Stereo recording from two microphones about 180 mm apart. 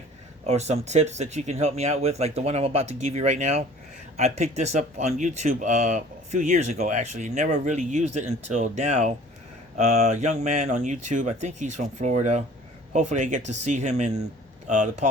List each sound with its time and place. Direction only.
0.4 s speech: 35° right (ahead or behind)